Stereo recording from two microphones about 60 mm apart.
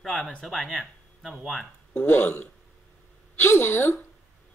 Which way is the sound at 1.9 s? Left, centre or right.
Left.